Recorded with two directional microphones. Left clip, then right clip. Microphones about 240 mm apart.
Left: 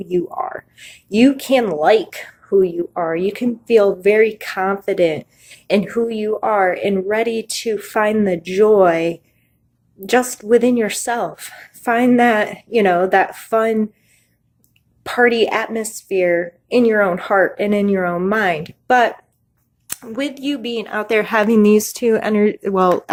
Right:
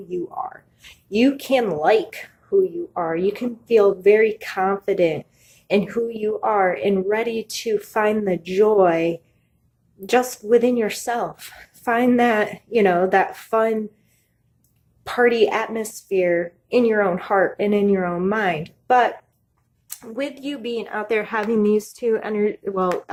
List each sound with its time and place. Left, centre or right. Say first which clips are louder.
0.1 s a woman's voice: left 7 dB; left
15.0 s a woman's voice: left 3 dB; left